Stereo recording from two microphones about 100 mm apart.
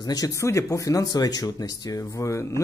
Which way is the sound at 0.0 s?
40° left (ahead or behind).